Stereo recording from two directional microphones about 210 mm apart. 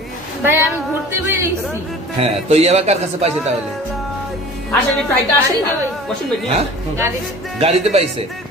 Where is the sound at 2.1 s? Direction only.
30° right (ahead or behind).